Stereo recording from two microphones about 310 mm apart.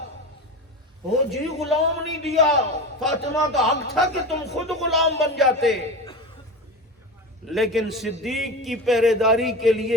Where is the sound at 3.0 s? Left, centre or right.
Centre.